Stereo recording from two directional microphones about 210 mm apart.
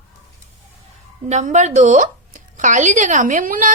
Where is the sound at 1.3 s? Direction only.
35° right (ahead or behind).